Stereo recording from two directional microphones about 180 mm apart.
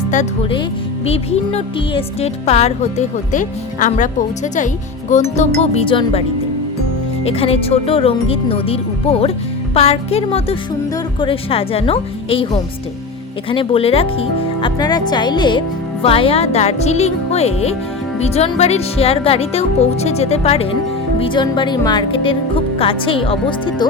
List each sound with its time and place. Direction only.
1.0 s speech: 35° left (ahead or behind)
7.3 s speech: 30° left (ahead or behind)
13.5 s speech: 30° left (ahead or behind)